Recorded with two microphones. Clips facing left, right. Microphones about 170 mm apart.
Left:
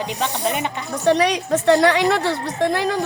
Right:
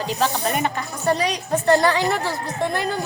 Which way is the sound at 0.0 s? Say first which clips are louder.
Right 1 dB; 15° left (ahead or behind).